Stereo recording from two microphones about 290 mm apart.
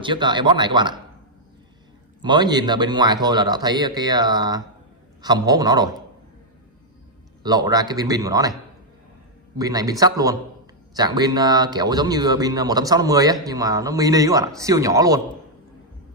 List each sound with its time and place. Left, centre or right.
0.0 s speech: centre
2.2 s speech: centre
7.4 s speech: centre
9.6 s speech: centre